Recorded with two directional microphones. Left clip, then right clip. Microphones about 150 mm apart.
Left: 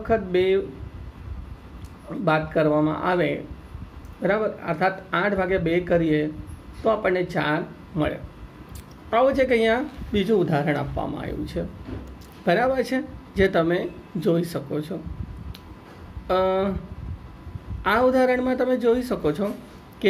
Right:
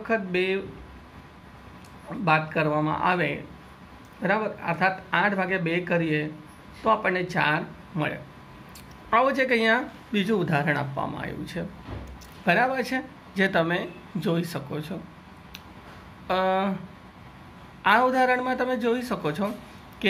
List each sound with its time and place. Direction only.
0.1 s speech: 15° left (ahead or behind)
2.2 s speech: 15° left (ahead or behind)
16.3 s speech: 15° left (ahead or behind)
17.8 s speech: 10° left (ahead or behind)